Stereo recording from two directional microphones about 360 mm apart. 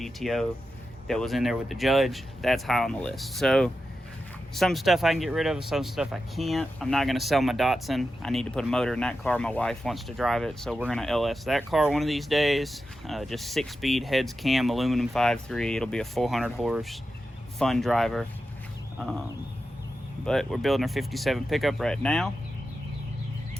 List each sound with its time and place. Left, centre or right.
0.0 s speech: centre
20.2 s speech: centre